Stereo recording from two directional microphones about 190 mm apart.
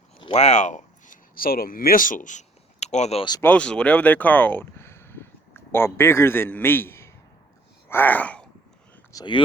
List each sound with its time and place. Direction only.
0.3 s speech: 35° left (ahead or behind)
3.4 s speech: 5° left (ahead or behind)
9.1 s speech: 25° left (ahead or behind)